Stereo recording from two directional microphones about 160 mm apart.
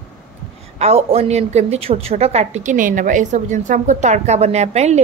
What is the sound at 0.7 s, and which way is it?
A woman's voice, 40° right (ahead or behind).